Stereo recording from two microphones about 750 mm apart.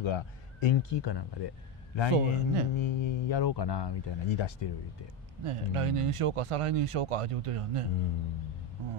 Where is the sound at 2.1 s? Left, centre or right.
Right.